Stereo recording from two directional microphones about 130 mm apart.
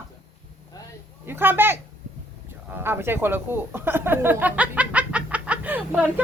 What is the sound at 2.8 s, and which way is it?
Speech, 20° right (ahead or behind).